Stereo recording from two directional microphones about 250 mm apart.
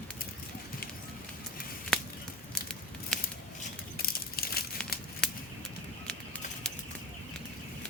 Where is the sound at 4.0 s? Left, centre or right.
Left.